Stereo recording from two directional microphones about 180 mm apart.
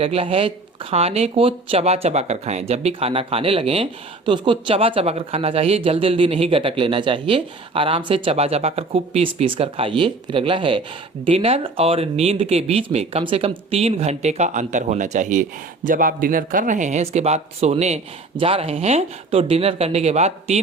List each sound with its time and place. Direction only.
0.0 s speech: 35° right (ahead or behind)